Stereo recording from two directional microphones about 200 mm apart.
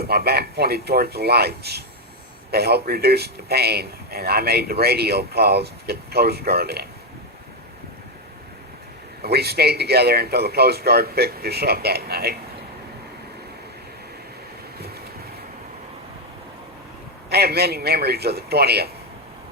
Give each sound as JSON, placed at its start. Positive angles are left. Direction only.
{"t": 0.0, "sound": "a man's voice", "side_deg": -50}
{"t": 9.2, "sound": "a man's voice", "side_deg": -55}
{"t": 17.2, "sound": "a man's voice", "side_deg": -50}